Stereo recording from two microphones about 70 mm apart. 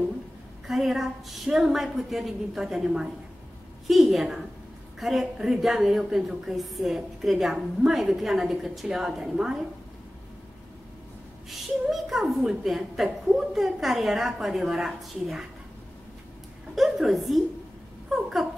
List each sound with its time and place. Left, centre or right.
0.7 s a woman's voice: centre
11.9 s a woman's voice: centre
16.7 s a woman's voice: centre